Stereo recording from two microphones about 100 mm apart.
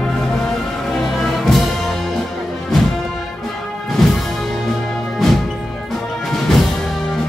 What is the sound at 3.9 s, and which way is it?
Music, centre (ahead or behind).